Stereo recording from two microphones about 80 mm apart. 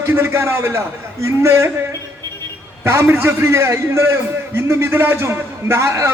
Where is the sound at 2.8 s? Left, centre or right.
Right.